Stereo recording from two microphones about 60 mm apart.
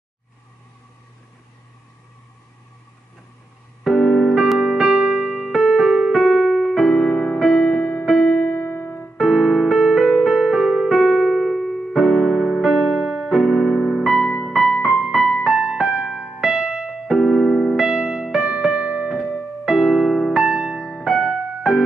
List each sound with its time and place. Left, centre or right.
3.8 s keyboard: centre
6.2 s music: centre
8.5 s music: left
9.1 s music: centre
10.9 s keyboard: centre
12.8 s keyboard: centre
14.5 s music: centre
15.4 s music: centre
16.3 s keyboard: centre
19.6 s music: centre